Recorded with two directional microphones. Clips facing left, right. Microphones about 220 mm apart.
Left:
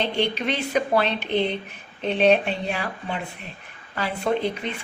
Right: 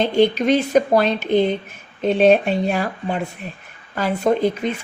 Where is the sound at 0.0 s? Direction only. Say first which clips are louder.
Right 8 dB; 45° right (ahead or behind).